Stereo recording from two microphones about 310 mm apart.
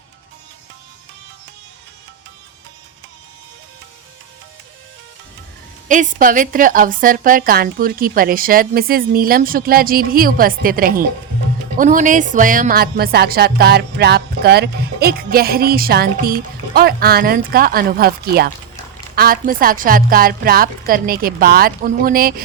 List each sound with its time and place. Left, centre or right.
5.9 s speech: right